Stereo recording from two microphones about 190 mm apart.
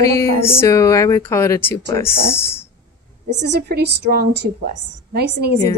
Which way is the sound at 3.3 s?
60° right (ahead or behind).